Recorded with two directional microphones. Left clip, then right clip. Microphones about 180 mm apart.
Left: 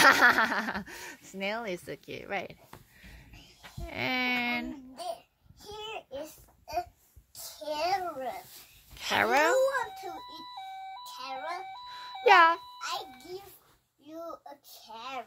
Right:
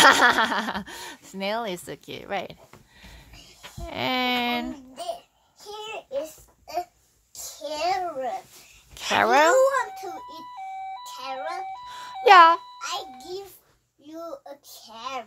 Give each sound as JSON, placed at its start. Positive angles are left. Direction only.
{"t": 0.0, "sound": "speech", "side_deg": -5}
{"t": 3.8, "sound": "speech", "side_deg": -10}
{"t": 5.7, "sound": "babbling", "side_deg": -15}
{"t": 7.6, "sound": "speech", "side_deg": -10}
{"t": 11.1, "sound": "speech", "side_deg": -5}
{"t": 11.9, "sound": "music", "side_deg": -20}
{"t": 12.7, "sound": "a child's voice", "side_deg": -5}